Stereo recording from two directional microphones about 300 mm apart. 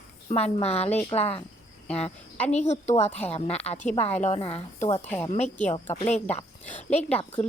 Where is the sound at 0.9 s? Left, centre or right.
Centre.